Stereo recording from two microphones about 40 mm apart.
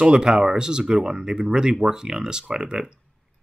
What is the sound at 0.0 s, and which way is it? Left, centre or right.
Speech, right.